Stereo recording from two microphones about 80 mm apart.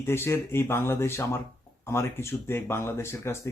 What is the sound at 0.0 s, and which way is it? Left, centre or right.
Speech, left.